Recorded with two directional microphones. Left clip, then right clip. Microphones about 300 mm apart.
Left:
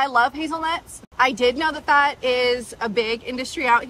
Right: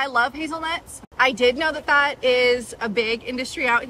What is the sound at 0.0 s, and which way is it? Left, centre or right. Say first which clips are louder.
A woman's voice: left 2 dB; centre.